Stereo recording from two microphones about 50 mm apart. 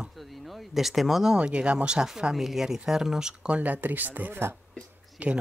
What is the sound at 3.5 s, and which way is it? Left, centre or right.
Speech, right.